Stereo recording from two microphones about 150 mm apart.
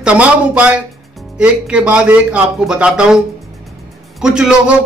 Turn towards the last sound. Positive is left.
turn(degrees=-5)  # may be behind; listen again after turning